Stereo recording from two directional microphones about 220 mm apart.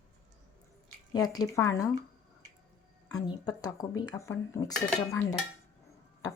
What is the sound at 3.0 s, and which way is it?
Speech, 15° left (ahead or behind).